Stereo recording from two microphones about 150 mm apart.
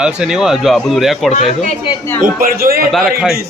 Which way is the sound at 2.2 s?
75° right (ahead or behind).